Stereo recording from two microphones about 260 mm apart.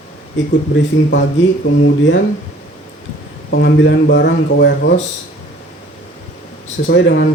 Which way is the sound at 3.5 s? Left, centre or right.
Left.